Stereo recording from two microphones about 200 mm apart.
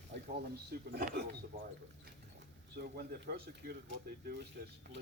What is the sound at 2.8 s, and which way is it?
Speech, 50° right (ahead or behind).